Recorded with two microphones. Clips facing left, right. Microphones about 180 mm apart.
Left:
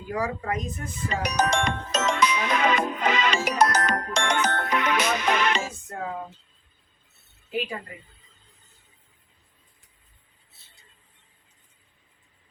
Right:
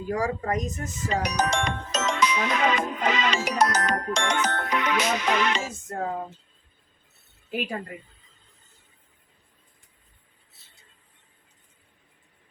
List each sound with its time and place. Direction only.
0.1 s speech: 45° right (ahead or behind)
1.2 s music: 55° left (ahead or behind)
5.9 s a sound: 35° right (ahead or behind)